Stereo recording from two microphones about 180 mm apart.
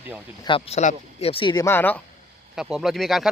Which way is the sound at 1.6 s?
10° left (ahead or behind).